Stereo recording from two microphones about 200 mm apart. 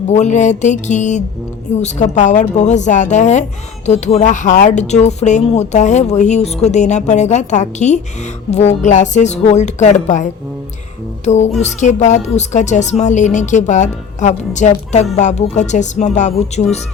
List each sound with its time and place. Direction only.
0.1 s speech: 35° left (ahead or behind)
11.3 s speech: 35° left (ahead or behind)